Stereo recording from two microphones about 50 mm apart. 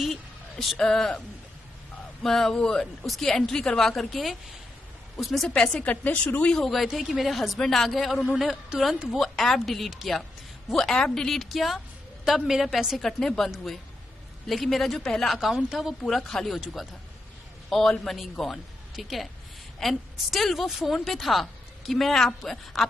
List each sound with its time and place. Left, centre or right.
0.0 s a sound: centre
0.7 s a woman's voice: centre
2.2 s a woman's voice: centre
5.5 s a woman's voice: centre
5.8 s a woman's voice: left
6.4 s a woman's voice: centre
6.9 s a woman's voice: centre
9.3 s a woman's voice: centre
11.0 s a woman's voice: centre
11.4 s a woman's voice: centre
13.2 s a woman's voice: centre
14.5 s a woman's voice: centre
16.1 s a woman's voice: centre